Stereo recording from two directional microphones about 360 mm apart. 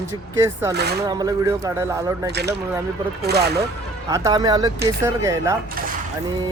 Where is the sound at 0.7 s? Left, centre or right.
Right.